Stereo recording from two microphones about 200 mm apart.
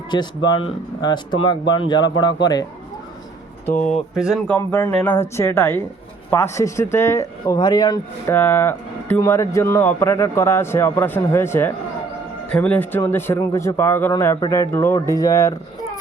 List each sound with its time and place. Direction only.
0.1 s speech: 20° left (ahead or behind)
3.7 s speech: 10° left (ahead or behind)
8.3 s speech: 10° left (ahead or behind)